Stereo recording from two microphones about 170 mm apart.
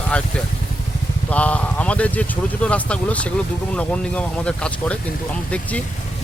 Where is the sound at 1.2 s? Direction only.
10° left (ahead or behind).